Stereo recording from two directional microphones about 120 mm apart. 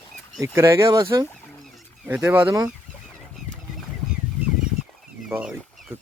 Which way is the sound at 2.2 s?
20° right (ahead or behind).